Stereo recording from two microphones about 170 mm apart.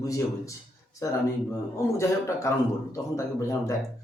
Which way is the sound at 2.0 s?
15° left (ahead or behind).